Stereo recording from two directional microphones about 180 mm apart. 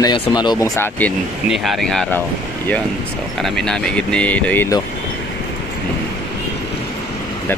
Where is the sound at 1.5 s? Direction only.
Centre (ahead or behind).